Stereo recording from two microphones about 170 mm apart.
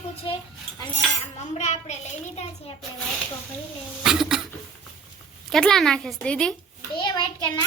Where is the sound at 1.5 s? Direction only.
40° left (ahead or behind).